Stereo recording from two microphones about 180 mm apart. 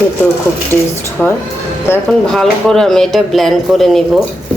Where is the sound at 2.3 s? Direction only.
Centre (ahead or behind).